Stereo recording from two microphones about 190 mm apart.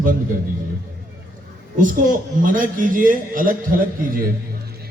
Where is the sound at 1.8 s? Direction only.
45° right (ahead or behind).